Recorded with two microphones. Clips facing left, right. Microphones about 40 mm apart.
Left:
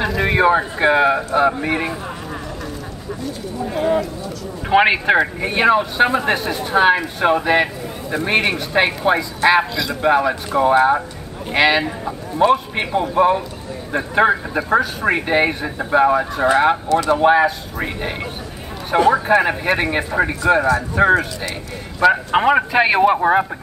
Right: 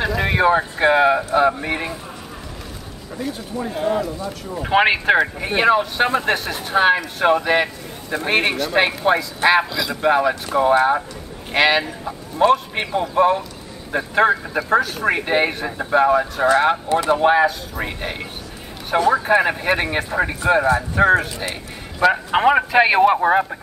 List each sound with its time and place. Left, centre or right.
0.0 s speech: centre
3.7 s speech: centre
16.9 s speech: right
17.2 s speech: centre